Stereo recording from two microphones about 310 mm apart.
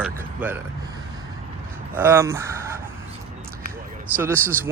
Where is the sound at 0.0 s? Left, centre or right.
Centre.